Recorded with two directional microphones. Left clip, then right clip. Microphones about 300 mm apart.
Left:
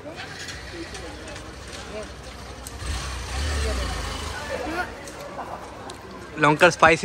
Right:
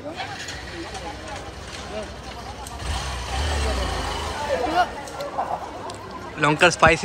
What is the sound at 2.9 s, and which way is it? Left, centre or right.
Vehicle, right.